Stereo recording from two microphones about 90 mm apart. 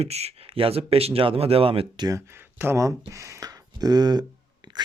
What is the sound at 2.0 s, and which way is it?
Speech, 40° right (ahead or behind).